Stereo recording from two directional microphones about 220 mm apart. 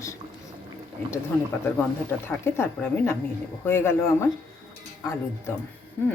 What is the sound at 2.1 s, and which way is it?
Speech, 10° left (ahead or behind).